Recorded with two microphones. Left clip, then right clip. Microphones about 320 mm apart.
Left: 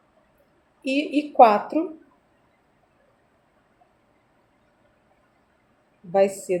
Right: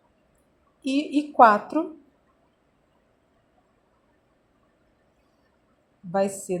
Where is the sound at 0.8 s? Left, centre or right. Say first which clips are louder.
Left 2 dB; centre.